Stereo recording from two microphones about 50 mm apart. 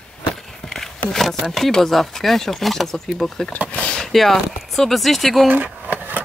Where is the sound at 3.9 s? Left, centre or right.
Centre.